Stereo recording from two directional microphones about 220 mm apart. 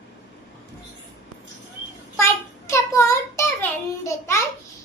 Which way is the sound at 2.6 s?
15° left (ahead or behind).